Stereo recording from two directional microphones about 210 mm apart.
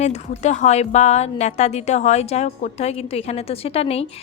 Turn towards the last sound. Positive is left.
turn(degrees=30)  # may be behind; listen again after turning